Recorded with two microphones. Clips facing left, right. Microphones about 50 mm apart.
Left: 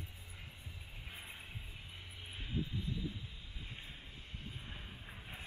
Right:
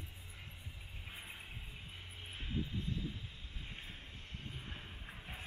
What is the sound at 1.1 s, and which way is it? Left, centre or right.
Vehicle, centre.